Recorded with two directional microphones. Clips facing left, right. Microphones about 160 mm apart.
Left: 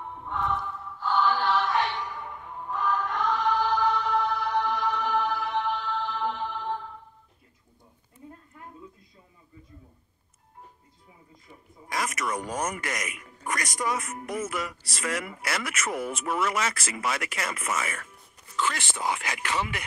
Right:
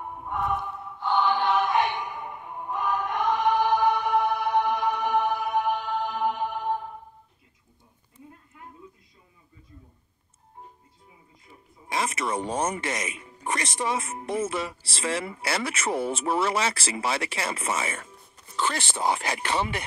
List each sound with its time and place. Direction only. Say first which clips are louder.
0.0 s music: right 2 dB; 10° right (ahead or behind)
11.9 s speech: right 2 dB; 25° right (ahead or behind)